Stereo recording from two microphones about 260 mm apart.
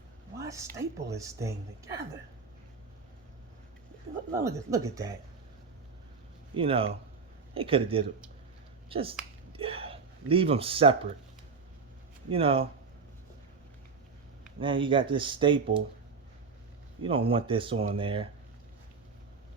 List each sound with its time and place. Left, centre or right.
0.3 s a sound: centre
0.8 s speech: centre
4.3 s speech: centre
6.5 s speech: right
12.3 s speech: right
14.6 s speech: centre
17.0 s speech: right